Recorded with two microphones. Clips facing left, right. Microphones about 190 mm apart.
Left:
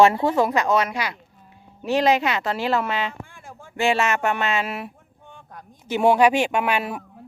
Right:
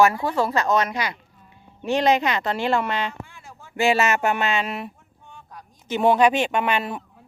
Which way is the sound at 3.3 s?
50° left (ahead or behind).